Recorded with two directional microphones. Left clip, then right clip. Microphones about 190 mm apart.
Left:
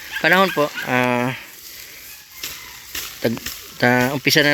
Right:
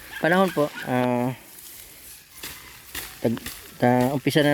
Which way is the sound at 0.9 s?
10° right (ahead or behind).